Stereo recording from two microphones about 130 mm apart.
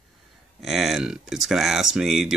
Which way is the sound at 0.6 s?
Centre (ahead or behind).